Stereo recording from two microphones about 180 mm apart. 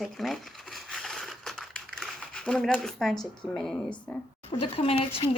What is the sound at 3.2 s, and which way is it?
Speech, 5° left (ahead or behind).